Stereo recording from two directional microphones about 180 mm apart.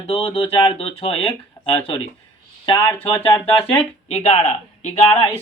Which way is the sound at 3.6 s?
35° left (ahead or behind).